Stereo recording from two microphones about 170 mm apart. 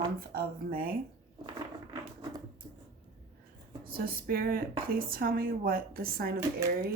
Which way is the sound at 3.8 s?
60° right (ahead or behind).